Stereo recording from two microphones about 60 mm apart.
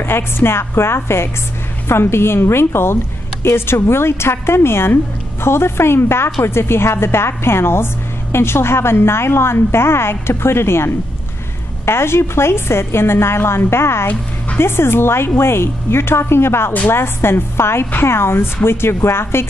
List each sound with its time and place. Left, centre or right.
0.0 s a woman's voice: left